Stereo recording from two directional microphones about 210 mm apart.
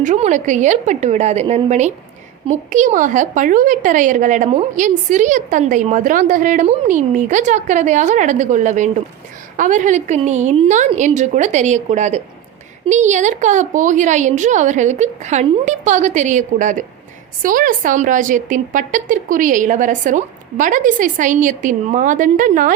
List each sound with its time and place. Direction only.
0.0 s a woman's voice: 35° right (ahead or behind)